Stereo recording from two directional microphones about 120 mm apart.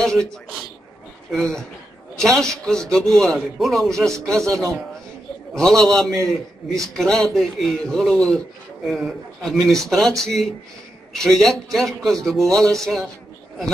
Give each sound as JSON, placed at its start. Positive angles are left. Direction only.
{"t": 0.0, "sound": "a man's voice", "side_deg": 5}
{"t": 4.3, "sound": "a man's voice", "side_deg": -25}
{"t": 5.5, "sound": "a man's voice", "side_deg": 5}